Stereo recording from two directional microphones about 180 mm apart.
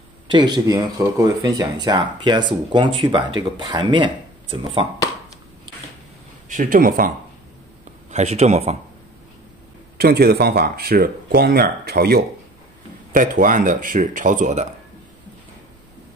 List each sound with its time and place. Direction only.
0.3 s speech: 25° right (ahead or behind)
6.5 s speech: 50° right (ahead or behind)
8.1 s speech: 40° right (ahead or behind)
9.9 s speech: 60° right (ahead or behind)
13.1 s speech: 50° right (ahead or behind)